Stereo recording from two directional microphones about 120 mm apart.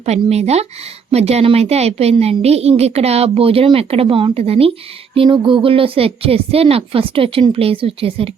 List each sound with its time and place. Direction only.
0.0 s a woman's voice: 65° right (ahead or behind)